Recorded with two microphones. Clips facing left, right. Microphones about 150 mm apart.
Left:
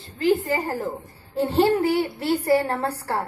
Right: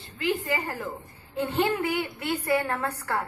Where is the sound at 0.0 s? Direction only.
35° left (ahead or behind).